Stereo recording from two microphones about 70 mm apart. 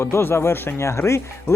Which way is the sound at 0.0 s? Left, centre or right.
Left.